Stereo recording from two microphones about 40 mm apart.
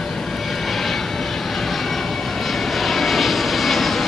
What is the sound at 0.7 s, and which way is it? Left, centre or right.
Vehicle, centre.